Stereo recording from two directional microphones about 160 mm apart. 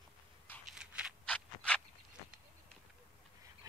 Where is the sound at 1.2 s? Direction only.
5° left (ahead or behind).